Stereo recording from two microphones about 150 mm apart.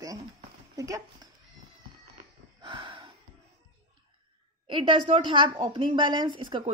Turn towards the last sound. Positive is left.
turn(degrees=-30)  # may be behind; listen again after turning